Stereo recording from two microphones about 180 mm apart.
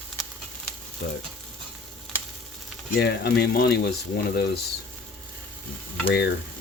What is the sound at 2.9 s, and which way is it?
Speech, 65° left (ahead or behind).